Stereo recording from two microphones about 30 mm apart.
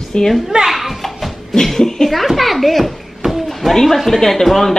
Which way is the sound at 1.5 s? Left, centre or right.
Centre.